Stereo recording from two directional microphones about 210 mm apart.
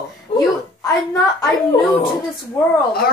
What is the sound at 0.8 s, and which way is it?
Speech, 15° left (ahead or behind).